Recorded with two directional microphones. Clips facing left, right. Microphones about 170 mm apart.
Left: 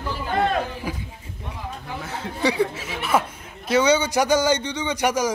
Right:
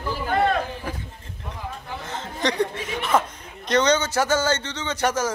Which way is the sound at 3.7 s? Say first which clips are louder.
Left 2 dB; 10° left (ahead or behind).